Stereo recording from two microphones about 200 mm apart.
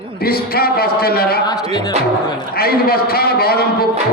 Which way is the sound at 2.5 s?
50° left (ahead or behind).